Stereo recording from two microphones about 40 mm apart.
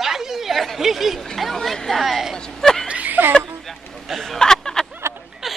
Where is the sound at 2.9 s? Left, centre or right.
Right.